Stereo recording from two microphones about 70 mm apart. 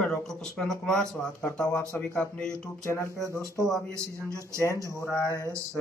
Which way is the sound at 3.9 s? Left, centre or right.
Right.